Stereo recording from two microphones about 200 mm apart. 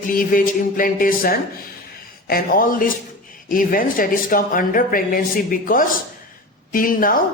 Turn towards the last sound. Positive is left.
turn(degrees=45)  # may be behind; listen again after turning